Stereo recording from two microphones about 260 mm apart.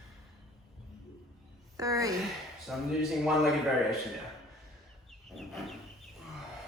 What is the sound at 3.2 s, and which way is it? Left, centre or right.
Speech, centre.